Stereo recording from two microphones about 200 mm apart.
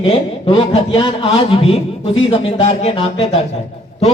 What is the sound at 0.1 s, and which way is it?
A man's voice, 25° left (ahead or behind).